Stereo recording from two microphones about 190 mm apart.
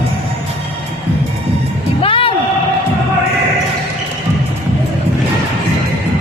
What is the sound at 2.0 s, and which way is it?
Music, 30° left (ahead or behind).